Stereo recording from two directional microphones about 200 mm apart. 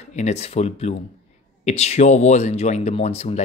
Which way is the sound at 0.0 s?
35° left (ahead or behind).